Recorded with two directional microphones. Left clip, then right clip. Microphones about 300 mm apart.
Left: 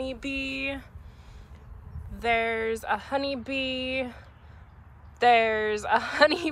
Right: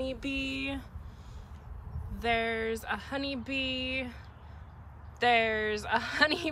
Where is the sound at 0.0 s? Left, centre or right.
Centre.